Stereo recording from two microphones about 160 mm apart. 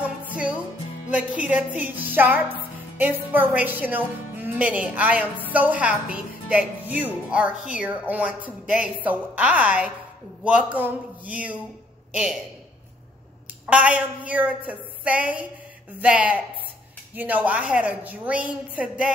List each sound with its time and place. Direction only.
1.1 s a woman's voice: 10° right (ahead or behind)
13.7 s a woman's voice: 10° right (ahead or behind)